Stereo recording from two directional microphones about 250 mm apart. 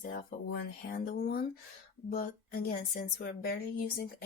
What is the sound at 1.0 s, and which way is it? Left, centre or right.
Speech, left.